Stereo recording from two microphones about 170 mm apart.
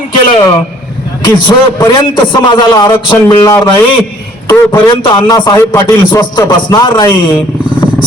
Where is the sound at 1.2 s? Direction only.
25° left (ahead or behind).